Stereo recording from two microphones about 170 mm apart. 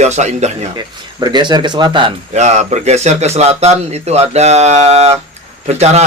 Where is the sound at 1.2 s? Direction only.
25° right (ahead or behind).